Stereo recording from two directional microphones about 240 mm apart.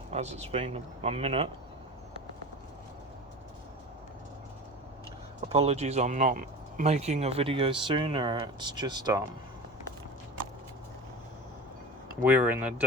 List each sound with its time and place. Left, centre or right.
0.1 s speech: right
5.5 s speech: right
12.2 s speech: centre